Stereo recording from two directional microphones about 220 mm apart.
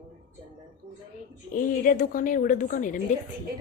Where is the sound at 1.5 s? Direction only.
40° left (ahead or behind).